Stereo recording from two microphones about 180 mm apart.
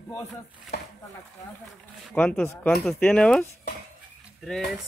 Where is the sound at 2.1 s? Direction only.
5° left (ahead or behind).